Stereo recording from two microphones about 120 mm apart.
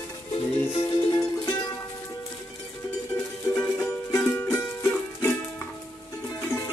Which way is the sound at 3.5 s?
25° left (ahead or behind).